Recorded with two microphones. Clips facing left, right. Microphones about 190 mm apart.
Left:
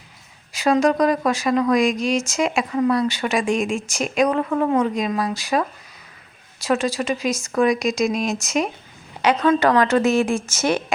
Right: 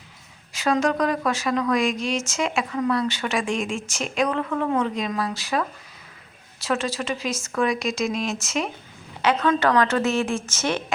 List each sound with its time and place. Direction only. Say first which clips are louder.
0.5 s a woman's voice: left 4 dB; 10° left (ahead or behind)
4.4 s a woman's voice: left 4 dB; 30° left (ahead or behind)
4.7 s a woman's voice: left 4 dB; 10° left (ahead or behind)